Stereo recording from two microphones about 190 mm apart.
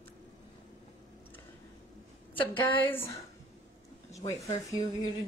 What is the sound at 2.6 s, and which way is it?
Speech, 10° left (ahead or behind).